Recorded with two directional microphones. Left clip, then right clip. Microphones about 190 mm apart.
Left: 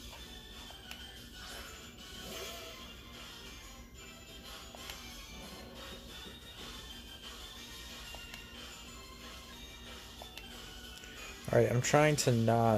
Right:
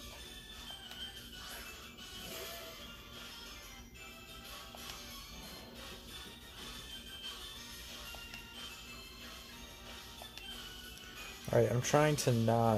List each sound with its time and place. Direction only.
11.4 s speech: 5° left (ahead or behind)